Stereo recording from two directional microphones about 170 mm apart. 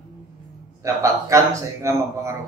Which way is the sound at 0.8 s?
20° right (ahead or behind).